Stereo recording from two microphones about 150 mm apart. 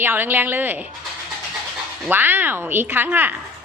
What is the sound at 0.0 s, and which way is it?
Speech, 15° right (ahead or behind).